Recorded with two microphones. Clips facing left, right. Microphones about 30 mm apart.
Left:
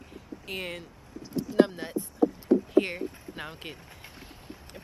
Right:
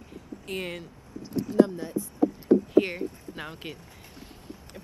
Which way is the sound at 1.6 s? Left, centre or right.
Left.